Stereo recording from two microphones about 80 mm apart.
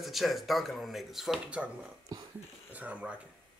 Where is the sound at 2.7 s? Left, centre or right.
Centre.